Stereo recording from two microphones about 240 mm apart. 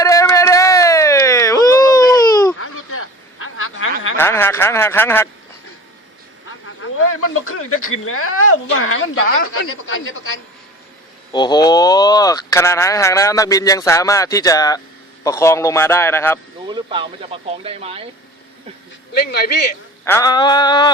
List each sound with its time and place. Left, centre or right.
0.0 s a sound: centre
2.6 s a sound: left
4.2 s speech: centre
6.8 s a woman's voice: left
11.3 s speech: centre
16.6 s speech: centre
19.1 s a man's voice: left
20.1 s speech: centre